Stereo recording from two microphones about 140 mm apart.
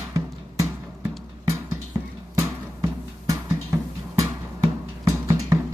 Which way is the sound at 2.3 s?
20° right (ahead or behind).